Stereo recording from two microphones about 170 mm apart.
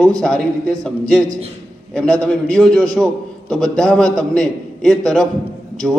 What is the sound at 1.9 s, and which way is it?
A man's voice, 5° left (ahead or behind).